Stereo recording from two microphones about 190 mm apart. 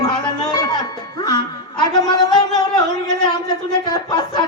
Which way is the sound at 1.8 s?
20° left (ahead or behind).